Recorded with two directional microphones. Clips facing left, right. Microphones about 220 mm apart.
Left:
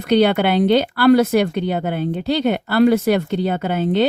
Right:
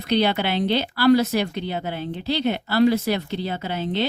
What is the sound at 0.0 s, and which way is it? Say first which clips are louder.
Speech: left 6 dB; 55° left (ahead or behind).